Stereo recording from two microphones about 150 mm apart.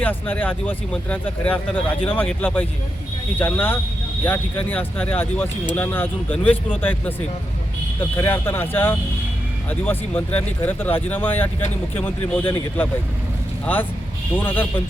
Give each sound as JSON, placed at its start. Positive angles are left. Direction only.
{"t": 0.0, "sound": "speech", "side_deg": 10}
{"t": 8.1, "sound": "speech", "side_deg": 15}
{"t": 14.3, "sound": "speech", "side_deg": 15}